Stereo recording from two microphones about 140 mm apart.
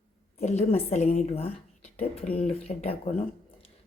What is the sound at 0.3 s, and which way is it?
A woman's voice, 50° left (ahead or behind).